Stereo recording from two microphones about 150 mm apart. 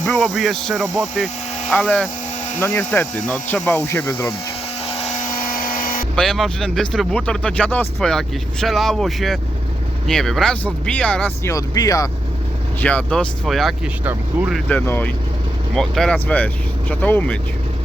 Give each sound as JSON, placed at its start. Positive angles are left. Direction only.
{"t": 0.1, "sound": "speech", "side_deg": 0}
{"t": 5.4, "sound": "a sound", "side_deg": 65}
{"t": 6.1, "sound": "speech", "side_deg": 0}
{"t": 11.5, "sound": "speech", "side_deg": 25}
{"t": 12.8, "sound": "speech", "side_deg": 10}
{"t": 14.0, "sound": "speech", "side_deg": -10}
{"t": 14.7, "sound": "speech", "side_deg": 10}